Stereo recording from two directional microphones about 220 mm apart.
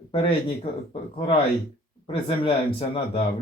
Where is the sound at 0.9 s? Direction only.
25° left (ahead or behind).